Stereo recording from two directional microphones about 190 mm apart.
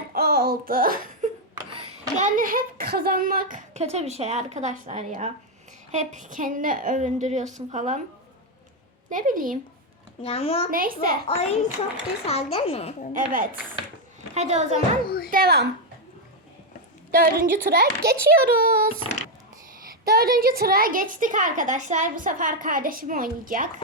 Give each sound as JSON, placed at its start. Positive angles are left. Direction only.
{"t": 0.1, "sound": "a sound", "side_deg": -55}
{"t": 2.1, "sound": "a woman's voice", "side_deg": -45}
{"t": 9.0, "sound": "a woman's voice", "side_deg": -45}
{"t": 10.2, "sound": "speech", "side_deg": 30}
{"t": 10.7, "sound": "a woman's voice", "side_deg": -50}
{"t": 11.3, "sound": "speech", "side_deg": 35}
{"t": 13.1, "sound": "a woman's voice", "side_deg": -45}
{"t": 14.3, "sound": "a woman's voice", "side_deg": -35}
{"t": 15.0, "sound": "speech", "side_deg": 55}
{"t": 15.3, "sound": "a child's voice", "side_deg": -55}
{"t": 17.1, "sound": "a woman's voice", "side_deg": -50}
{"t": 20.1, "sound": "a woman's voice", "side_deg": -50}